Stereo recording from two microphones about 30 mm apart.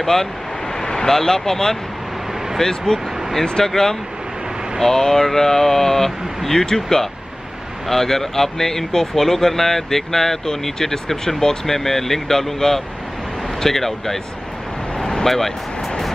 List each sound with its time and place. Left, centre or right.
0.0 s speech: centre
15.0 s vehicle: left
15.2 s speech: centre